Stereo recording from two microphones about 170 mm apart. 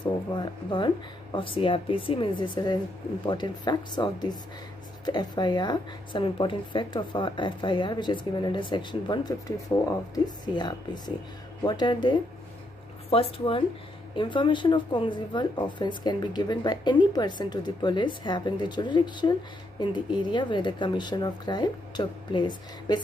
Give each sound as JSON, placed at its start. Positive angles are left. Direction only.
{"t": 0.0, "sound": "speech", "side_deg": 25}